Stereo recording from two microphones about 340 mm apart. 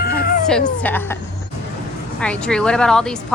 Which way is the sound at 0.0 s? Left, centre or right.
Left.